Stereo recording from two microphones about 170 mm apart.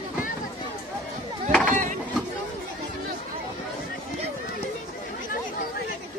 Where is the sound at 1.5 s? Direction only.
5° left (ahead or behind).